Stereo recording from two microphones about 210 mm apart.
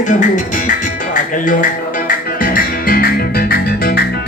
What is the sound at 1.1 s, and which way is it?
Speech, 40° left (ahead or behind).